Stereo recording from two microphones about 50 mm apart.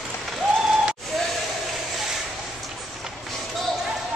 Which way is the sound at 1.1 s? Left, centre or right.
Centre.